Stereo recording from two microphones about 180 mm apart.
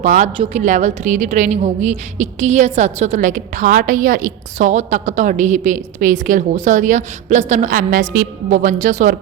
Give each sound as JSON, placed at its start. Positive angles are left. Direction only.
{"t": 0.0, "sound": "a woman's voice", "side_deg": -45}